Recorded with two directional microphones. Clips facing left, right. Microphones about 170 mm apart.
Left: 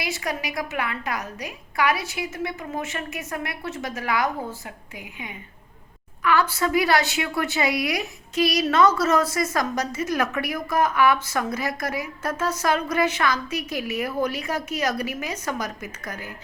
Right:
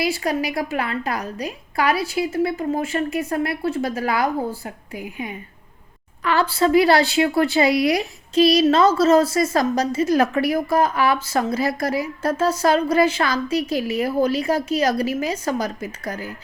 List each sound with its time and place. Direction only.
0.0 s a woman's voice: 30° right (ahead or behind)
6.2 s a woman's voice: 30° right (ahead or behind)